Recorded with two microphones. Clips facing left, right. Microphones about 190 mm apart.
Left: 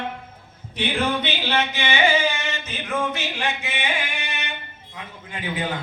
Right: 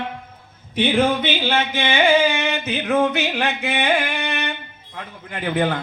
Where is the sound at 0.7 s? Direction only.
50° right (ahead or behind).